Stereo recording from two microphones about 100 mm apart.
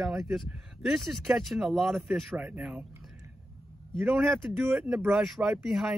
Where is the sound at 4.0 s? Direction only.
Centre (ahead or behind).